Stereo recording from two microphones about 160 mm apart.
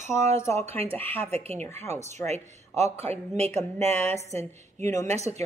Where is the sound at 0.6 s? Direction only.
40° right (ahead or behind).